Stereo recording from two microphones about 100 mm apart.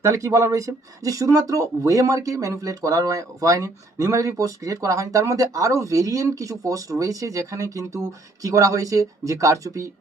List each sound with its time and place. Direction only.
0.0 s speech: 30° right (ahead or behind)